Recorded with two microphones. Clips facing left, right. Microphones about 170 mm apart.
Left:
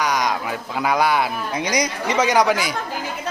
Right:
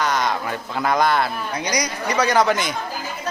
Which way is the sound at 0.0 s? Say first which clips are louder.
Even; 10° left (ahead or behind).